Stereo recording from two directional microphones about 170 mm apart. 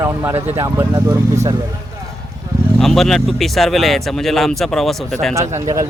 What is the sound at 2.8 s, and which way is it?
Speech, centre (ahead or behind).